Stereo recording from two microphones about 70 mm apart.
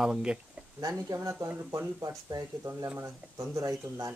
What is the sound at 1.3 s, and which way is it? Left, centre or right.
Speech, right.